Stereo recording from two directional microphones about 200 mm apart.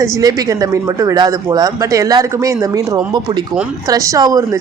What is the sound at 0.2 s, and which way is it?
Speech, 20° right (ahead or behind).